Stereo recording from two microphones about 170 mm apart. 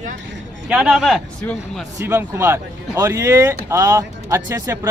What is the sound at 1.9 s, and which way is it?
Speech, 15° right (ahead or behind).